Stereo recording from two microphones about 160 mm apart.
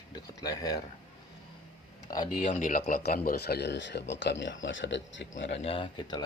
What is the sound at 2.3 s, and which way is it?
Speech, 50° left (ahead or behind).